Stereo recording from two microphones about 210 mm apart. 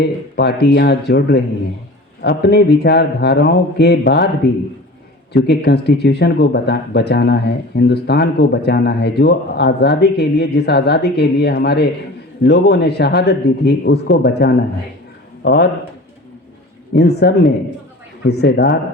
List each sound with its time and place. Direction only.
0.0 s speech: 50° left (ahead or behind)
5.3 s speech: 50° left (ahead or behind)
16.9 s speech: 50° left (ahead or behind)